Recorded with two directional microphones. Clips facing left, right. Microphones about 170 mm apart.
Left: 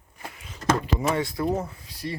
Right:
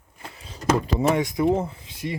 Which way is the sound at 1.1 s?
20° right (ahead or behind).